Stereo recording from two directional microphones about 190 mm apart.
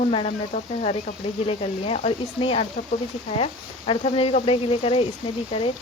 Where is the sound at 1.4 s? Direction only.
30° left (ahead or behind).